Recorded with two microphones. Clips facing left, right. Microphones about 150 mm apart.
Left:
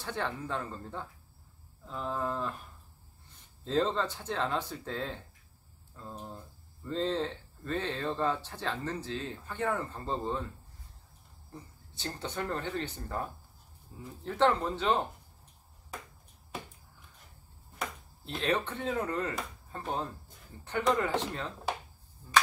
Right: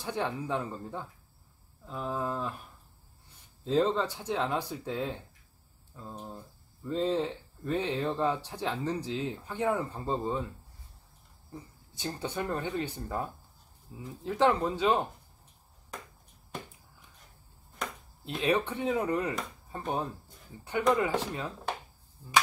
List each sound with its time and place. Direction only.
0.0 s speech: 15° right (ahead or behind)
3.6 s speech: 10° right (ahead or behind)
11.5 s speech: 10° right (ahead or behind)
18.2 s speech: 15° right (ahead or behind)
20.9 s speech: 10° right (ahead or behind)